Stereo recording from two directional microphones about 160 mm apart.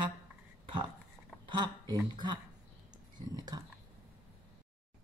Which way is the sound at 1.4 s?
30° right (ahead or behind).